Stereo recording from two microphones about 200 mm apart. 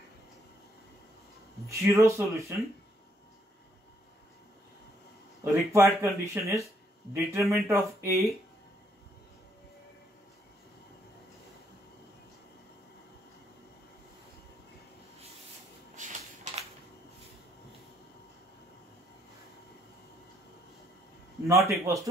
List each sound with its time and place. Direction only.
1.7 s speech: 15° right (ahead or behind)
5.4 s speech: 15° right (ahead or behind)
16.0 s a sound: 35° right (ahead or behind)
21.5 s speech: 15° right (ahead or behind)